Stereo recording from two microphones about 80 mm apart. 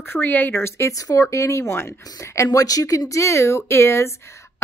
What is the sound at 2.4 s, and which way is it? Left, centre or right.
A woman's voice, left.